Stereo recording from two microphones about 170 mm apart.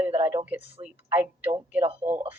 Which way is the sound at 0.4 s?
10° right (ahead or behind).